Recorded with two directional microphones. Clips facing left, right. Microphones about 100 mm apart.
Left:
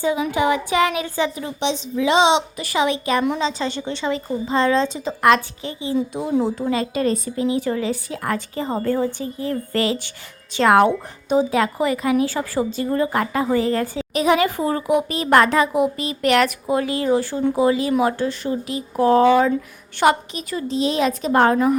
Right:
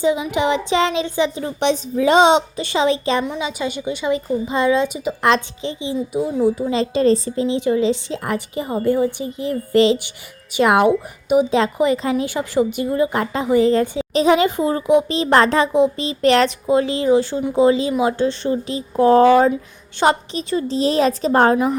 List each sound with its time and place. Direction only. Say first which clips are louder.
0.0 s a woman's voice: right 1 dB; 20° right (ahead or behind)
1.5 s a woman's voice: right 5 dB; 55° right (ahead or behind)
2.6 s a woman's voice: right 2 dB; 30° right (ahead or behind)
3.4 s a woman's voice: even; 10° right (ahead or behind)
5.2 s a woman's voice: left 2 dB; 25° right (ahead or behind)
19.2 s a woman's voice: right 2 dB; 40° right (ahead or behind)
20.0 s a woman's voice: even; 30° right (ahead or behind)